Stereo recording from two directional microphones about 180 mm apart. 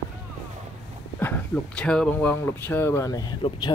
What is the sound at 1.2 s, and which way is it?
Speech, 5° left (ahead or behind).